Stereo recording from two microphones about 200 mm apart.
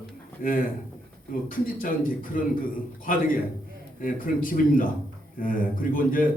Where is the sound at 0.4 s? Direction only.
45° left (ahead or behind).